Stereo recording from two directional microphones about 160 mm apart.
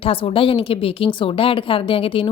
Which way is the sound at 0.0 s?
35° left (ahead or behind).